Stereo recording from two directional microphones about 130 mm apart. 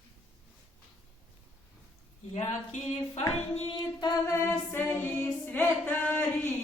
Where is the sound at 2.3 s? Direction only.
60° left (ahead or behind).